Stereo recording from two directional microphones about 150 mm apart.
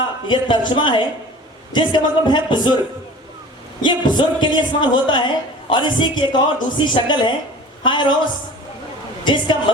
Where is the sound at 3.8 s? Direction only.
30° left (ahead or behind).